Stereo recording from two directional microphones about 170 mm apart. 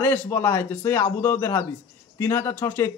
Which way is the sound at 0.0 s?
10° left (ahead or behind).